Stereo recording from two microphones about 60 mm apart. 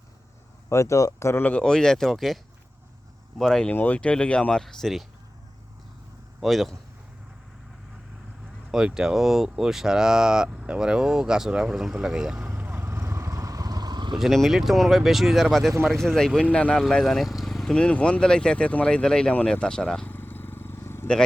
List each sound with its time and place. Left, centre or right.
0.7 s speech: left
1.6 s speech: centre
3.7 s speech: left
4.6 s speech: centre
6.4 s speech: centre
8.7 s speech: centre
12.4 s vehicle: right
14.2 s speech: centre; by 16.7 s left
16.7 s speech: centre
17.2 s vehicle: centre
17.7 s speech: centre
19.0 s speech: centre
20.1 s vehicle: left